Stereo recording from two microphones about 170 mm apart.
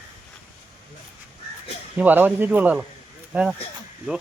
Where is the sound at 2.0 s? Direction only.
10° right (ahead or behind).